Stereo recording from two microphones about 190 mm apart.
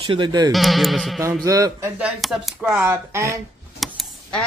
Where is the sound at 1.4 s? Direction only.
15° right (ahead or behind).